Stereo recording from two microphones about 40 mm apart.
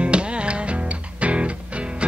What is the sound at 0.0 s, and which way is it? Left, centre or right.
Music, right.